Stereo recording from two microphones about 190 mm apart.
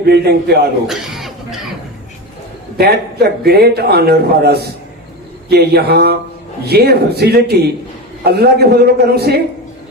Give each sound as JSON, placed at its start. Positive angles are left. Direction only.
{"t": 0.0, "sound": "a man's voice", "side_deg": -60}
{"t": 0.9, "sound": "chuckle", "side_deg": 0}
{"t": 2.7, "sound": "a man's voice", "side_deg": -55}